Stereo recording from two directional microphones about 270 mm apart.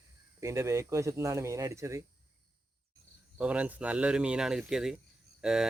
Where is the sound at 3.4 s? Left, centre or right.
Centre.